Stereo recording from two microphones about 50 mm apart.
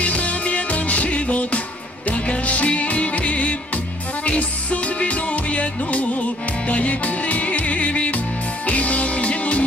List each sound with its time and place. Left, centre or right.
0.0 s music: left